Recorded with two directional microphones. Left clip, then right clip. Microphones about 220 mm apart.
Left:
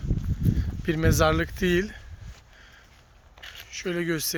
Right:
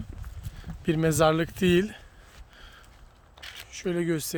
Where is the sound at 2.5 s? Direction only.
30° right (ahead or behind).